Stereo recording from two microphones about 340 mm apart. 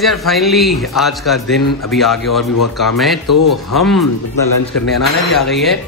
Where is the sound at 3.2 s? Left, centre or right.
Left.